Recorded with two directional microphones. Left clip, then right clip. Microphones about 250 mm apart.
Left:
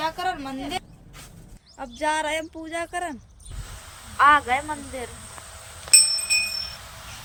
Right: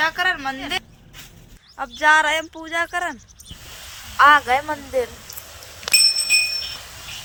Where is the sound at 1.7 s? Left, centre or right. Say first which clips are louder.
Right 10 dB; centre.